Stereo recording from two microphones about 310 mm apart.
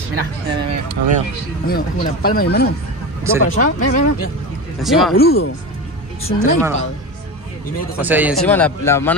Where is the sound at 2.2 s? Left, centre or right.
Left.